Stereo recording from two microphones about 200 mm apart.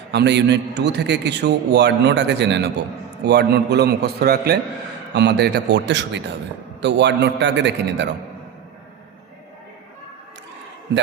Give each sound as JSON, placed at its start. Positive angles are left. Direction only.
{"t": 0.1, "sound": "a man's voice", "side_deg": -60}